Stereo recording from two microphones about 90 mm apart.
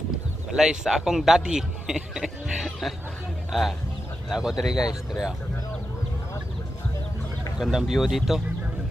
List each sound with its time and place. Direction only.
0.5 s a man's voice: 5° right (ahead or behind)
4.8 s speech: 40° left (ahead or behind)
7.6 s a man's voice: 5° right (ahead or behind)